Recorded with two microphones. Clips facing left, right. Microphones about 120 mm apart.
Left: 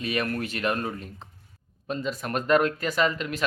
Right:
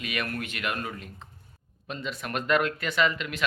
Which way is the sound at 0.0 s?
35° left (ahead or behind).